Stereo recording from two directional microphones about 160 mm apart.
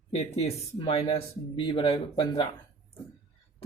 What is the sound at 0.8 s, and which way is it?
Speech, 35° left (ahead or behind).